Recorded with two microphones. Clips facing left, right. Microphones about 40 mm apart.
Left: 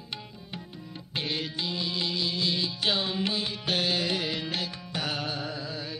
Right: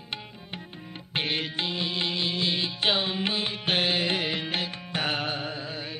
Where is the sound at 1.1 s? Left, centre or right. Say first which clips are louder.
Right 3 dB; right.